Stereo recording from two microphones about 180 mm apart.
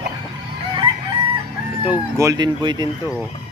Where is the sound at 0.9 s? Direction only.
30° right (ahead or behind).